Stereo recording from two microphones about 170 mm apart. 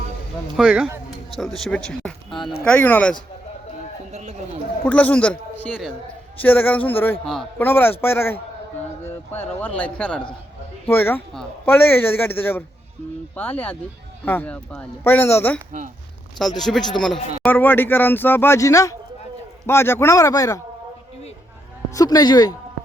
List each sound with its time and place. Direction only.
0.5 s speech: 5° right (ahead or behind)
2.3 s speech: 30° left (ahead or behind)
2.6 s a man's voice: 10° left (ahead or behind)
4.1 s speech: 45° right (ahead or behind)
4.9 s a man's voice: 10° left (ahead or behind)
16.6 s a man's voice: centre (ahead or behind); by 20.6 s 20° left (ahead or behind)
21.8 s speech: 20° left (ahead or behind)